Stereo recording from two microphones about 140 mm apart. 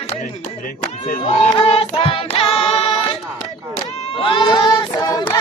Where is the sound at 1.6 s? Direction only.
45° left (ahead or behind).